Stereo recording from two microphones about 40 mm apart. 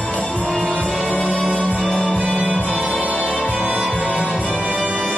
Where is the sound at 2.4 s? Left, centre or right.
Right.